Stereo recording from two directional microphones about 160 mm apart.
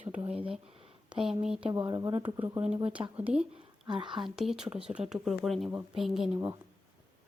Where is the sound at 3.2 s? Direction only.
10° right (ahead or behind).